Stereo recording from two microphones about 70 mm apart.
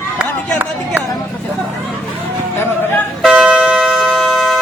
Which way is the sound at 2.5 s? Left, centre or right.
Left.